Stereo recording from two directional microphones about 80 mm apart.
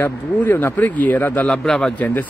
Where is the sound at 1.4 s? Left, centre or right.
Centre.